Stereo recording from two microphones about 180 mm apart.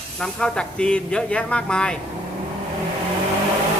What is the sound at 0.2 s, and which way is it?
Speech, 5° left (ahead or behind).